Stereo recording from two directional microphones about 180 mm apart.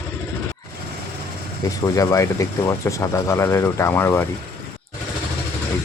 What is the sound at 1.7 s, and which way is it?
Speech, 20° left (ahead or behind).